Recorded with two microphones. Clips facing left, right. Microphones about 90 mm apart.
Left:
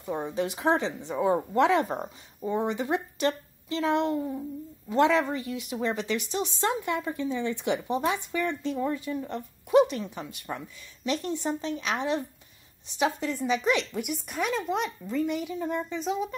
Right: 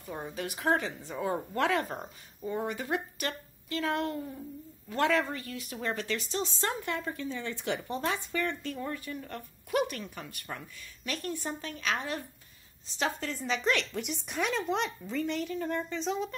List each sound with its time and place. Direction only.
0.0 s a woman's voice: 25° left (ahead or behind); by 16.3 s 5° left (ahead or behind)